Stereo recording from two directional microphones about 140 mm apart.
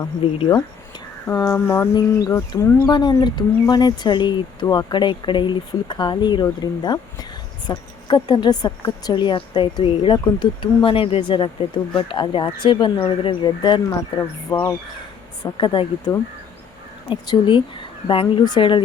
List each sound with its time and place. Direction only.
0.3 s speech: 35° left (ahead or behind)
1.5 s speech: 15° left (ahead or behind); by 13.8 s 35° left (ahead or behind)
14.2 s speech: 20° left (ahead or behind)
15.6 s speech: 35° left (ahead or behind)